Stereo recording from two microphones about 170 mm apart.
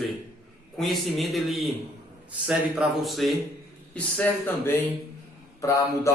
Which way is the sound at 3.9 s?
10° left (ahead or behind).